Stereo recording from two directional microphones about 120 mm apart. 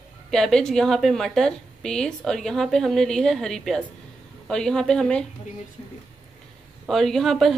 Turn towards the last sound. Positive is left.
turn(degrees=5)  # may be behind; listen again after turning